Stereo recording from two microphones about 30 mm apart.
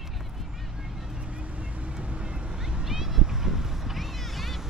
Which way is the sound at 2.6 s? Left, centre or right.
Centre.